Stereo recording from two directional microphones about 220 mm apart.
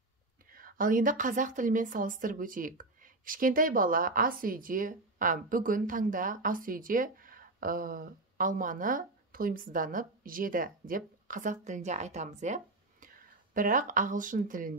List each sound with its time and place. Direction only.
0.5 s a woman's voice: 40° right (ahead or behind)